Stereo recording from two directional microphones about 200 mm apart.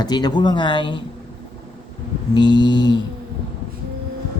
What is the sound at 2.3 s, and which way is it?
Speech, 20° left (ahead or behind).